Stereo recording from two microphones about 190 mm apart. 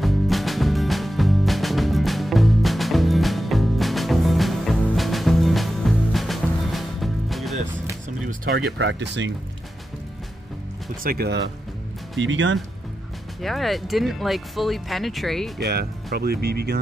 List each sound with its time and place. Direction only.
0.0 s music: centre (ahead or behind)
8.3 s a sound: 50° right (ahead or behind)
8.7 s speech: 75° right (ahead or behind)
11.1 s speech: 55° right (ahead or behind)
12.2 s speech: 80° right
13.4 s speech: centre (ahead or behind)
15.6 s speech: 55° right (ahead or behind)